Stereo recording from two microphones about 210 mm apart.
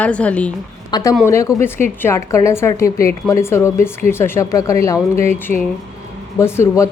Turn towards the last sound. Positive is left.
turn(degrees=15)  # may be behind; listen again after turning